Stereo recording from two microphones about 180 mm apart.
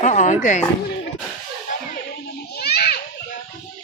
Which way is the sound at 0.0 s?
40° left (ahead or behind).